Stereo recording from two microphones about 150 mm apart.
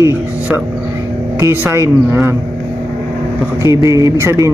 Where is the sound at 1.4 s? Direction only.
15° right (ahead or behind).